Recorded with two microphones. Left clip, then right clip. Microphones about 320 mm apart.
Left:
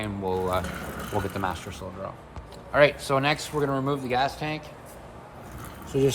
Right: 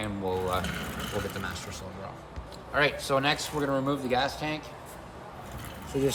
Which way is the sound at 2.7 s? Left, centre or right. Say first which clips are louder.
Left 5 dB; centre.